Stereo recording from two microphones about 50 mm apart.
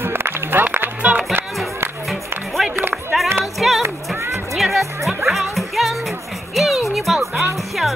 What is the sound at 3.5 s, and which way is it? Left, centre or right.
Music, centre.